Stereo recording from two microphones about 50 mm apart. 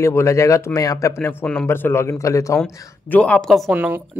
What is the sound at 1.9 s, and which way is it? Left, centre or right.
Speech, left.